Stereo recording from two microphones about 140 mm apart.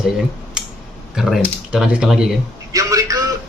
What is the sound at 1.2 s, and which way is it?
Speech, 5° right (ahead or behind).